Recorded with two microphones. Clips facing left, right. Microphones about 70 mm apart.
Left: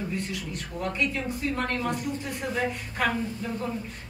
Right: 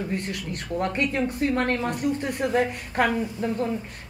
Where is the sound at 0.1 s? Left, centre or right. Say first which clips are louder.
Right 3 dB; right.